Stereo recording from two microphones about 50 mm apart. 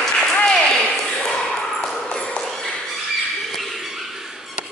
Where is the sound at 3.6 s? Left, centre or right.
Centre.